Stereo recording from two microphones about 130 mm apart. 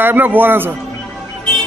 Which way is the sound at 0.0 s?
15° right (ahead or behind).